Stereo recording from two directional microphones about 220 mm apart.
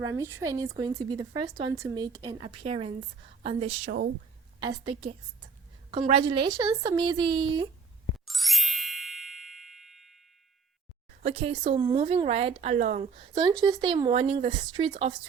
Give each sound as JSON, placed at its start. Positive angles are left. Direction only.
{"t": 0.0, "sound": "speech", "side_deg": -10}
{"t": 8.2, "sound": "ding", "side_deg": 0}
{"t": 11.2, "sound": "speech", "side_deg": -30}
{"t": 13.6, "sound": "speech", "side_deg": -20}